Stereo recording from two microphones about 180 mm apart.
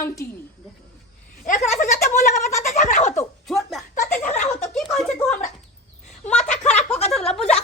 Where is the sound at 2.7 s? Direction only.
45° left (ahead or behind).